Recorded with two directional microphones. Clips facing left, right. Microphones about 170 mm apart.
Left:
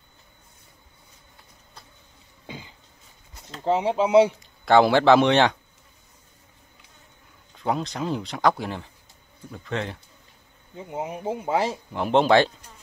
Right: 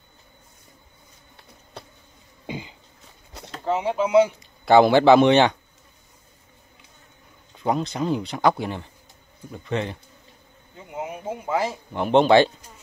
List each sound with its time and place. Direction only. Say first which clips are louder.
1.3 s insect: right 10 dB; 75° right (ahead or behind)
2.4 s cough: right 7 dB; 15° right (ahead or behind)
3.6 s speech: left 1 dB; 30° left (ahead or behind)
4.4 s speech: right 2 dB; centre (ahead or behind)
7.5 s speech: right 2 dB; centre (ahead or behind)
10.9 s speech: left 2 dB; 30° left (ahead or behind)
11.9 s speech: right 3 dB; centre (ahead or behind)